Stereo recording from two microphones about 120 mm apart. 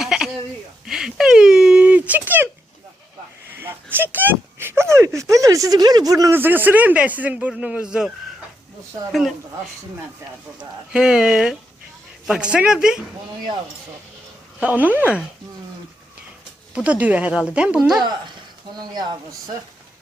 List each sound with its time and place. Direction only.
0.0 s a sound: 5° right (ahead or behind)
3.6 s a sound: 20° right (ahead or behind)
6.3 s a man's voice: 15° right (ahead or behind)
10.6 s speech: 5° right (ahead or behind)
14.6 s a man's voice: 15° right (ahead or behind)
16.7 s a man's voice: 10° right (ahead or behind)
18.7 s speech: 35° right (ahead or behind)